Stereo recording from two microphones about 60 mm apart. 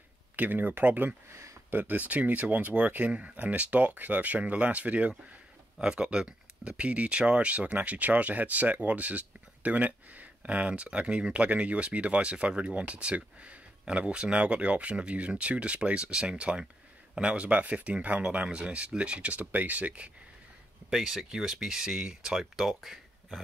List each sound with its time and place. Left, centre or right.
0.4 s speech: right
1.3 s a sound: right
1.7 s speech: right
20.9 s speech: centre